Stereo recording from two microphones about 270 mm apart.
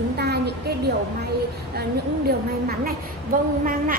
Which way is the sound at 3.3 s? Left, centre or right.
Right.